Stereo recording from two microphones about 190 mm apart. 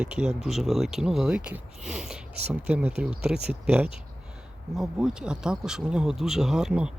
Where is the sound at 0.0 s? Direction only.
5° right (ahead or behind).